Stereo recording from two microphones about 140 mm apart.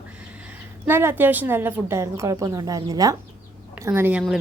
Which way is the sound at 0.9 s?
15° right (ahead or behind).